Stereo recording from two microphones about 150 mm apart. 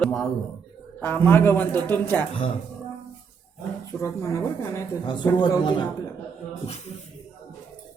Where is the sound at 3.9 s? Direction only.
20° left (ahead or behind).